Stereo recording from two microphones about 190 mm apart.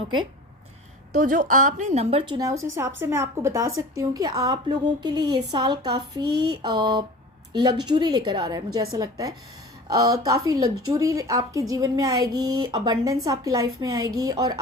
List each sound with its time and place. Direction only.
1.1 s a woman's voice: 45° right (ahead or behind); by 14.6 s 20° right (ahead or behind)